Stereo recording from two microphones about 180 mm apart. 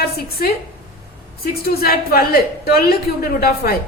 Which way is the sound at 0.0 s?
60° left (ahead or behind).